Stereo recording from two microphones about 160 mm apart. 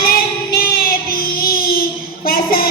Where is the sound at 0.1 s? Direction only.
65° left (ahead or behind).